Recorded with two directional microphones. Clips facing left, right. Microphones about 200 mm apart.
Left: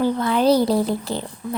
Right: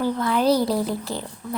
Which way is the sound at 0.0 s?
25° left (ahead or behind).